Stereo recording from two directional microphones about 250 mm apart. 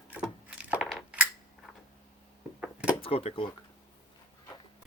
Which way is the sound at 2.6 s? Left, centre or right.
Centre.